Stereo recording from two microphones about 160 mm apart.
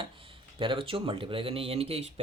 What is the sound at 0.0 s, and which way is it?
Speech, 35° right (ahead or behind).